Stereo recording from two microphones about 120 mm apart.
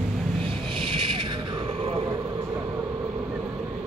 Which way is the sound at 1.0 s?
45° right (ahead or behind).